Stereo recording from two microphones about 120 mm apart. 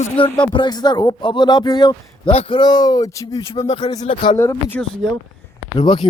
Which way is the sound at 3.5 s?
50° left (ahead or behind).